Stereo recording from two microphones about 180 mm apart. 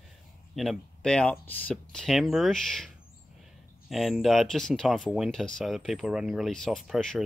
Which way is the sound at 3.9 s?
Centre (ahead or behind).